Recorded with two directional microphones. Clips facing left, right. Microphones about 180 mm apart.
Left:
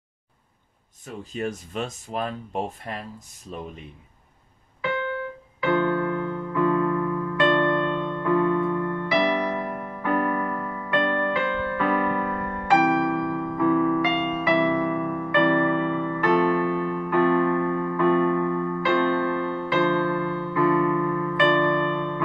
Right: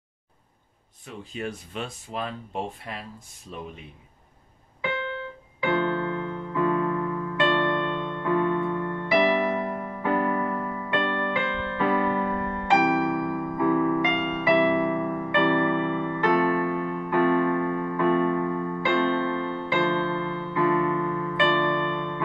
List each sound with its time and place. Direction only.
1.0 s speech: 45° left (ahead or behind)
5.1 s keyboard: 20° right (ahead or behind)
9.6 s music: 20° right (ahead or behind)
17.1 s keyboard: 20° right (ahead or behind)